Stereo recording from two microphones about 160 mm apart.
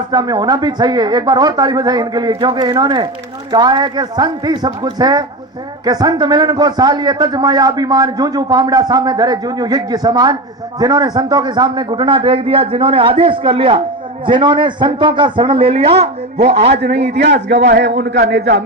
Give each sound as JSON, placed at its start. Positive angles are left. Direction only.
{"t": 0.1, "sound": "a man's voice", "side_deg": -25}
{"t": 17.5, "sound": "a man's voice", "side_deg": -90}